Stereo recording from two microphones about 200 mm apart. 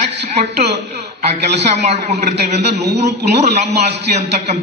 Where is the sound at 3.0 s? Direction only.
35° right (ahead or behind).